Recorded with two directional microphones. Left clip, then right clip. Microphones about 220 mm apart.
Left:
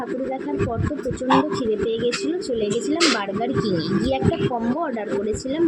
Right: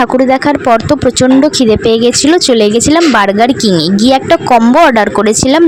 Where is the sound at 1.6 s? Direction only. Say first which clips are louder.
Right 14 dB; 55° right (ahead or behind).